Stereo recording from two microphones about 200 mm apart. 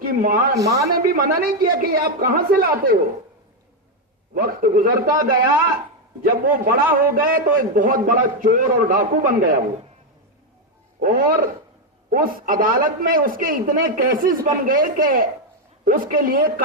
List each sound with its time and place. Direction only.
0.0 s speech: 45° right (ahead or behind)
0.5 s speech: 15° right (ahead or behind)
0.9 s a man's voice: 45° right (ahead or behind)
4.4 s a man's voice: 45° right (ahead or behind)
11.0 s a man's voice: 45° right (ahead or behind)